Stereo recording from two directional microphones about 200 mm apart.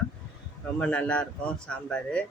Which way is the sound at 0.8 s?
5° left (ahead or behind).